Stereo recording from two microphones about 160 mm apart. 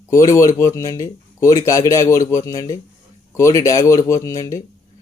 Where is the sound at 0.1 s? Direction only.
20° left (ahead or behind).